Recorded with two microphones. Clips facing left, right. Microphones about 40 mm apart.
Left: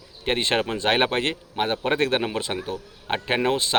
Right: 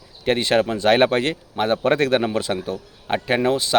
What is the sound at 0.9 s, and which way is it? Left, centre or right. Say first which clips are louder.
Speech: right 5 dB; centre.